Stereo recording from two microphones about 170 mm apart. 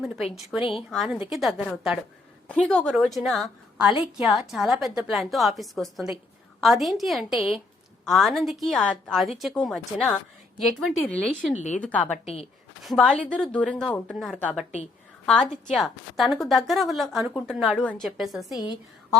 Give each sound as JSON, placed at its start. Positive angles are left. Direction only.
{"t": 0.5, "sound": "a woman's voice", "side_deg": 0}
{"t": 11.5, "sound": "a woman's voice", "side_deg": 45}
{"t": 11.8, "sound": "a woman's voice", "side_deg": 10}
{"t": 12.2, "sound": "speech", "side_deg": 35}
{"t": 12.8, "sound": "a woman's voice", "side_deg": 0}
{"t": 15.7, "sound": "a woman's voice", "side_deg": 0}